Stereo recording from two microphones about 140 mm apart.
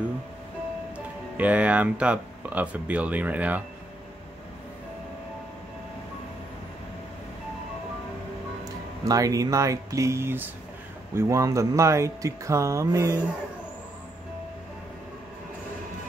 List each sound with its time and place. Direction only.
0.9 s speech: 10° right (ahead or behind)
8.6 s speech: 25° right (ahead or behind)